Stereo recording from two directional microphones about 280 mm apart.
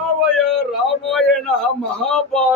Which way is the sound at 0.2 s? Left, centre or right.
Centre.